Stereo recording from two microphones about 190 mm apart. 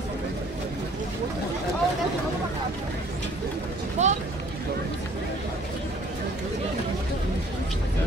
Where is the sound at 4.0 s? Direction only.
35° right (ahead or behind).